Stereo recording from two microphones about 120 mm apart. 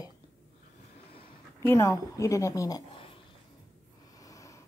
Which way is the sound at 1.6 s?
25° left (ahead or behind).